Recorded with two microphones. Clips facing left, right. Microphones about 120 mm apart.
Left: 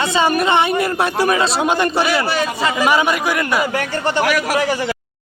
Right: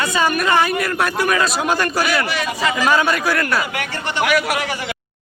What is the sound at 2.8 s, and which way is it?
Speech, 15° left (ahead or behind).